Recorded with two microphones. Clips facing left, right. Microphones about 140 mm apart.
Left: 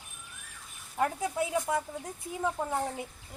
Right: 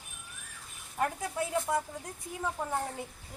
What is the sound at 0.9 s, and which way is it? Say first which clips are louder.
Speech: left 3 dB; 20° left (ahead or behind).